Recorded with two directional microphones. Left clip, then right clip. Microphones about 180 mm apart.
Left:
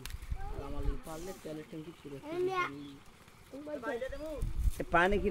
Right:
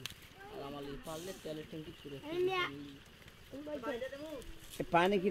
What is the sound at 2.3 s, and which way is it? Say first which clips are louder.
Speech: left 1 dB; 5° left (ahead or behind).